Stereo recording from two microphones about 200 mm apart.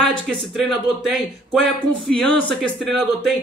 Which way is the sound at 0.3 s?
Centre (ahead or behind).